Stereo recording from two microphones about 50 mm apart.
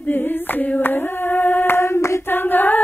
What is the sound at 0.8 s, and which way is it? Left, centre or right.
Singing, left.